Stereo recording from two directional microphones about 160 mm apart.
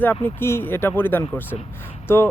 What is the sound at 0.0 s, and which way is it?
Speech, 10° left (ahead or behind).